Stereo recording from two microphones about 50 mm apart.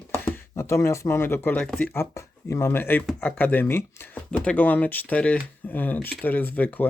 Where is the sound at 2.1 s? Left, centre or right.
Left.